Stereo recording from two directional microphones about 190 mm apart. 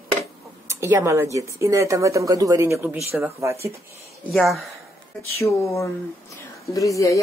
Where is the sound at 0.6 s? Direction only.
15° right (ahead or behind).